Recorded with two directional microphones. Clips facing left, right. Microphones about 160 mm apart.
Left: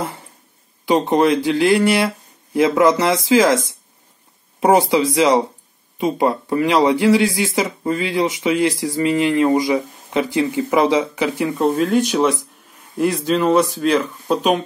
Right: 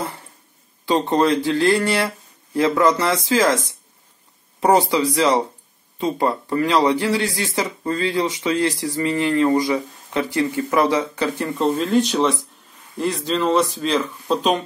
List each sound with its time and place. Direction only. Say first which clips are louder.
0.8 s speech: left 3 dB; 20° left (ahead or behind)
4.6 s speech: left 2 dB; 20° left (ahead or behind)